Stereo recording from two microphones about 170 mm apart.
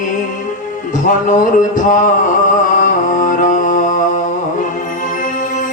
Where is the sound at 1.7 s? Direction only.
50° left (ahead or behind).